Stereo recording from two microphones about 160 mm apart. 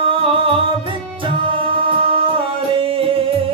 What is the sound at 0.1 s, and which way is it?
Music, 35° right (ahead or behind).